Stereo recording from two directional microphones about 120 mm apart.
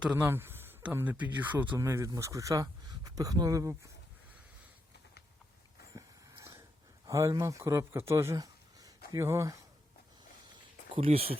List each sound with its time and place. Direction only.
0.0 s speech: 15° right (ahead or behind)
5.9 s a sound: 25° right (ahead or behind)
7.1 s speech: 25° right (ahead or behind)
10.9 s speech: 55° right (ahead or behind)